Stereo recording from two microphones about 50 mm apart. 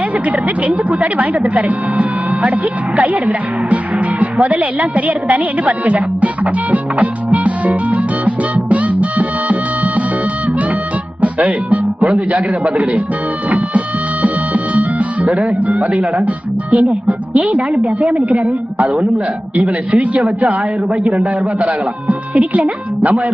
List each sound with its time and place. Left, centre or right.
0.1 s speech: right
7.3 s music: right
11.2 s music: right
12.0 s speech: right
13.5 s music: right
16.7 s speech: right